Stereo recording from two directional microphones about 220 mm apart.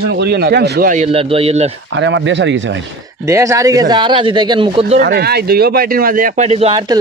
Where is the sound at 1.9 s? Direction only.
55° right (ahead or behind).